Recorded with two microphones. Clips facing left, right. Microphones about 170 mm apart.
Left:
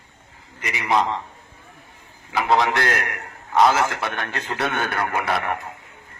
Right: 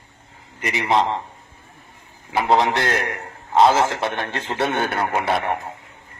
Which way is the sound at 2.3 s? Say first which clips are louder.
Right 2 dB; 25° right (ahead or behind).